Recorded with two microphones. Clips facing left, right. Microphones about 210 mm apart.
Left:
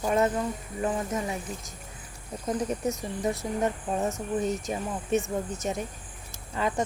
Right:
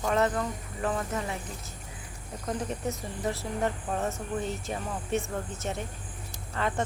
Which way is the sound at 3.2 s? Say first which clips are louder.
Left 2 dB; 20° left (ahead or behind).